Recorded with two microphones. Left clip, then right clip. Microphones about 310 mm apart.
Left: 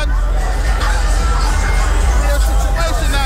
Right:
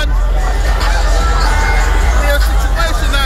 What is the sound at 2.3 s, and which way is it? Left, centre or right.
Music, centre.